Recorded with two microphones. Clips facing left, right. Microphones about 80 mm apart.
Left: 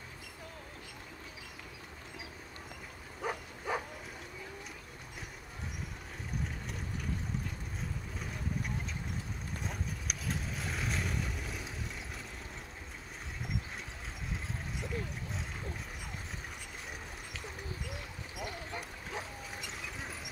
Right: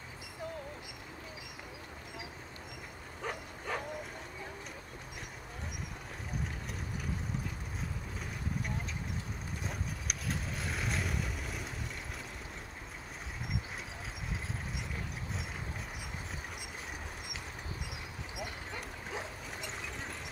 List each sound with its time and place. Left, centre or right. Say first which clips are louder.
3.2 s bow-wow: left 2 dB; centre
9.6 s vehicle: even; centre
17.8 s a sound: even; centre
18.7 s bow-wow: even; centre